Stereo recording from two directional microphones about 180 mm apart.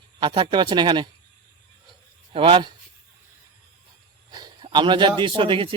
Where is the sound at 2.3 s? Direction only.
30° right (ahead or behind).